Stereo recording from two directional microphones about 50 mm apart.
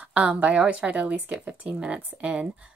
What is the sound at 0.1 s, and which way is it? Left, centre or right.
A woman's voice, right.